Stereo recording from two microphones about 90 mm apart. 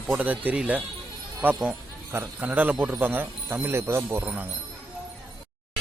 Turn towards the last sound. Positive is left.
turn(degrees=-10)  # may be behind; listen again after turning